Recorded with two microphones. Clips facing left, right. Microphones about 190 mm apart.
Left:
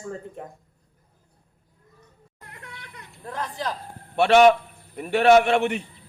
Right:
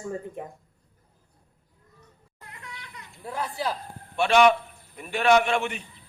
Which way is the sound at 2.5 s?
50° left (ahead or behind).